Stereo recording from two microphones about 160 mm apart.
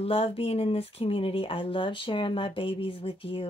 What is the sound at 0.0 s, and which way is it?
Speech, 35° left (ahead or behind).